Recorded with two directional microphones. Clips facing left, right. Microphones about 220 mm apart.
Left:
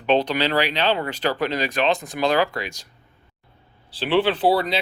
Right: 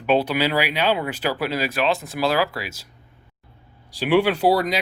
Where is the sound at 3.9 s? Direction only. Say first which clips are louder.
Right 2 dB; 10° right (ahead or behind).